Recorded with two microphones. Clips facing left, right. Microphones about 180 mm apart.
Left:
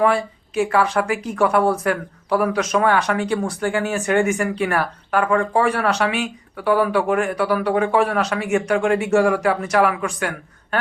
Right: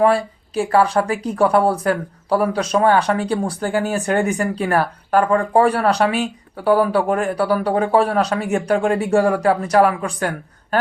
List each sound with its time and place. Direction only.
0.0 s speech: 30° right (ahead or behind)